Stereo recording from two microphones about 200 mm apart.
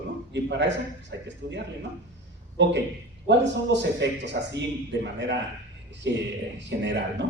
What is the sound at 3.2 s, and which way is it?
Speech, 60° right (ahead or behind).